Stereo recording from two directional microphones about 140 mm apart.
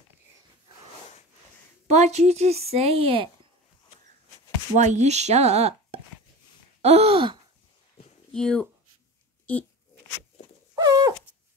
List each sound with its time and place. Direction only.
1.9 s speech: 50° right (ahead or behind)
4.7 s speech: 55° right (ahead or behind); by 7.3 s 40° right (ahead or behind)
8.3 s speech: 5° left (ahead or behind)
10.8 s dog: 25° right (ahead or behind)